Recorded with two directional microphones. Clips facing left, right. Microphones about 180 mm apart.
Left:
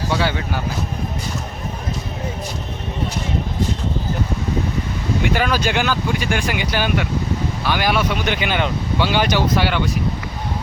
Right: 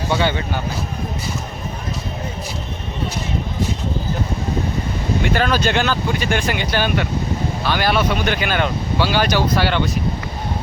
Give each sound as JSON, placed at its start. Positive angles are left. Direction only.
{"t": 0.1, "sound": "speech", "side_deg": 5}
{"t": 5.2, "sound": "speech", "side_deg": 10}